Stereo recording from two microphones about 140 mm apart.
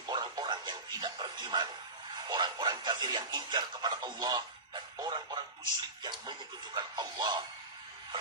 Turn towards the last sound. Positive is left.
turn(degrees=-30)  # may be behind; listen again after turning